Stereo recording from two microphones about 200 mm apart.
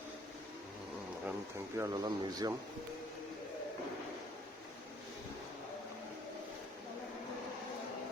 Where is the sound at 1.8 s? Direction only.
20° right (ahead or behind).